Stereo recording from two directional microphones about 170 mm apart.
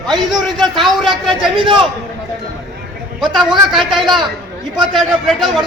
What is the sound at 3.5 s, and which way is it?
A man's voice, centre (ahead or behind).